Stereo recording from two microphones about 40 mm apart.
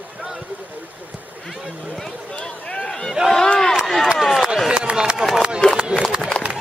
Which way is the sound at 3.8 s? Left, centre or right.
Centre.